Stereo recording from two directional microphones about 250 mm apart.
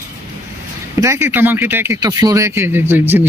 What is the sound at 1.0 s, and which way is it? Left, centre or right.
Speech, centre.